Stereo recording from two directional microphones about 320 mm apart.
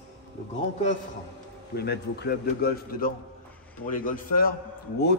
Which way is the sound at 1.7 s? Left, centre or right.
Left.